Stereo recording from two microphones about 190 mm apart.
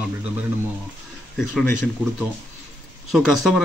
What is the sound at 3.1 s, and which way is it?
Speech, centre (ahead or behind).